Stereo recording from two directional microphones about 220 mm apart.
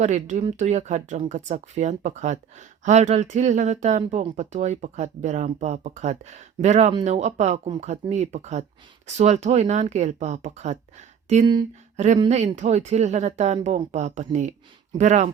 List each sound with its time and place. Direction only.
0.0 s speech: 35° right (ahead or behind)